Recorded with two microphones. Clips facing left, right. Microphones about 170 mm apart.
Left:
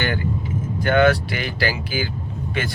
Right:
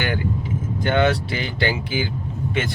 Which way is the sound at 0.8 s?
20° right (ahead or behind).